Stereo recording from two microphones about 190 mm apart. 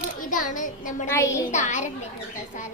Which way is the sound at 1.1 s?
15° left (ahead or behind).